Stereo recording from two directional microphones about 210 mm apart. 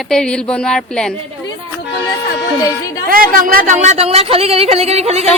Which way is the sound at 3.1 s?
45° right (ahead or behind).